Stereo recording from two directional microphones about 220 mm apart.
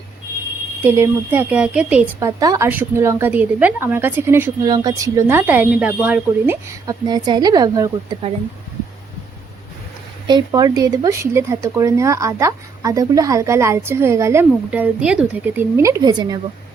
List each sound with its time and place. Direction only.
0.8 s a woman's voice: 10° right (ahead or behind)
10.2 s a woman's voice: 20° right (ahead or behind)